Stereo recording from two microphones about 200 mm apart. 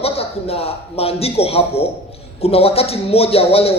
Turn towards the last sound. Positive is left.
turn(degrees=30)  # may be behind; listen again after turning